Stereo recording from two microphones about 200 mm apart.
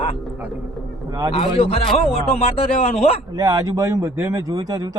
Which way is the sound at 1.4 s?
30° left (ahead or behind).